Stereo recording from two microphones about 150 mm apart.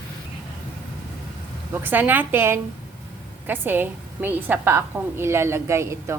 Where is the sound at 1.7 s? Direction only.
15° right (ahead or behind).